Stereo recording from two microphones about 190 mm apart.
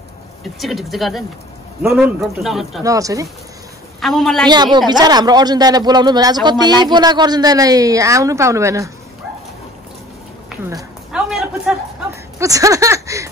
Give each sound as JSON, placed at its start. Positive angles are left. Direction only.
{"t": 0.6, "sound": "a man's voice", "side_deg": 0}
{"t": 2.8, "sound": "speech", "side_deg": -15}
{"t": 4.0, "sound": "a man's voice", "side_deg": 0}
{"t": 4.7, "sound": "speech", "side_deg": -20}
{"t": 10.6, "sound": "speech", "side_deg": -20}
{"t": 11.1, "sound": "a man's voice", "side_deg": -5}
{"t": 12.4, "sound": "speech", "side_deg": -15}